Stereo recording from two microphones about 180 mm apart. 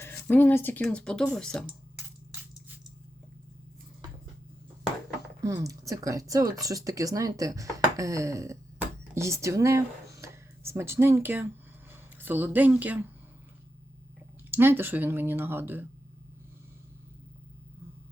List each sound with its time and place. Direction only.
0.0 s speech: 10° left (ahead or behind)
5.4 s speech: 20° right (ahead or behind)
14.5 s speech: 10° right (ahead or behind)